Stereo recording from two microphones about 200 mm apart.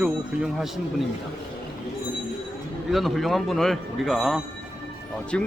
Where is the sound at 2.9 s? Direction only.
Centre (ahead or behind).